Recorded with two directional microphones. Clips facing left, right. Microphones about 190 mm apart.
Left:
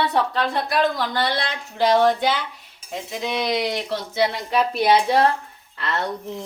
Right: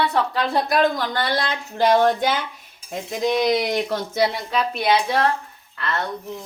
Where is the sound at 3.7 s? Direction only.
45° right (ahead or behind).